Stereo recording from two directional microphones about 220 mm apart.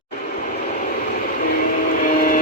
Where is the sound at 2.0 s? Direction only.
40° left (ahead or behind).